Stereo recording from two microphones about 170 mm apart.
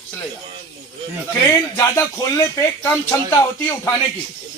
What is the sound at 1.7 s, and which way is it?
Speech, 15° left (ahead or behind).